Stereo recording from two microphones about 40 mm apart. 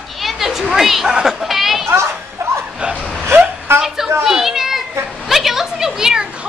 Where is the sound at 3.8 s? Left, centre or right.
Centre.